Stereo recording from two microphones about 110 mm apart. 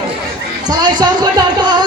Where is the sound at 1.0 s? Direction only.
40° right (ahead or behind).